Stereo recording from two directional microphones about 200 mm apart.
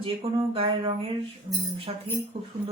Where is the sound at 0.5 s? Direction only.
25° right (ahead or behind).